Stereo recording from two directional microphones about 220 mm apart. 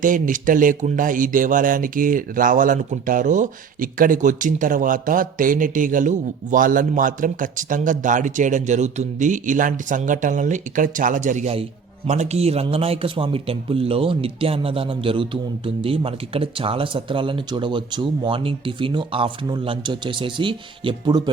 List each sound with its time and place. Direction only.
0.0 s a man's voice: 35° right (ahead or behind); by 21.2 s 20° right (ahead or behind)